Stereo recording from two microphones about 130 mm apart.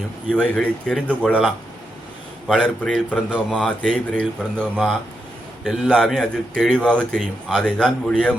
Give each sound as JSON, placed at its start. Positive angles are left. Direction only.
{"t": 0.3, "sound": "a man's voice", "side_deg": 10}
{"t": 1.3, "sound": "a man's voice", "side_deg": -5}
{"t": 3.2, "sound": "a man's voice", "side_deg": -5}
{"t": 3.7, "sound": "a man's voice", "side_deg": 5}